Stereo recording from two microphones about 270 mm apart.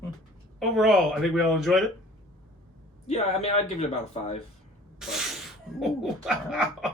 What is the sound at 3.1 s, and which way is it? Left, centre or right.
Speech, left.